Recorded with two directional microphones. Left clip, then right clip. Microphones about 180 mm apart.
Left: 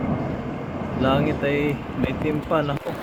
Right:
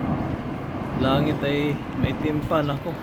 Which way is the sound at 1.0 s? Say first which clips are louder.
Left 1 dB; 15° right (ahead or behind).